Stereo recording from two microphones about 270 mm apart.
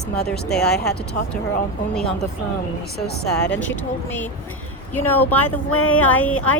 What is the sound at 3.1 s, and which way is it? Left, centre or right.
Speech, left.